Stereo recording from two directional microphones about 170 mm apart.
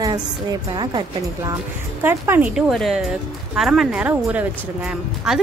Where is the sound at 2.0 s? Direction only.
10° right (ahead or behind).